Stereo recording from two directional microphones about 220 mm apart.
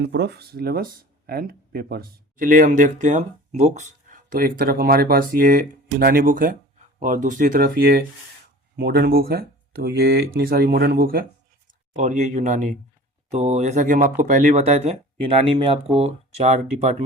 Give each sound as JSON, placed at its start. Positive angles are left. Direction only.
{"t": 0.0, "sound": "speech", "side_deg": -50}